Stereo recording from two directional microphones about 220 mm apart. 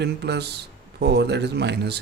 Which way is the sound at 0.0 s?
50° right (ahead or behind).